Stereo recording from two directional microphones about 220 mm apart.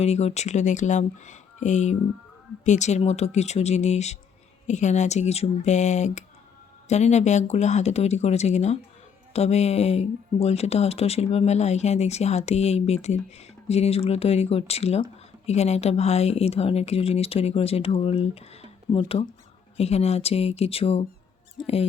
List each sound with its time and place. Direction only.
0.0 s speech: 30° left (ahead or behind)
21.6 s speech: centre (ahead or behind)